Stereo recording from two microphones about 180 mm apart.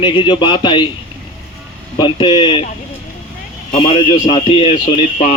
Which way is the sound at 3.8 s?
30° left (ahead or behind).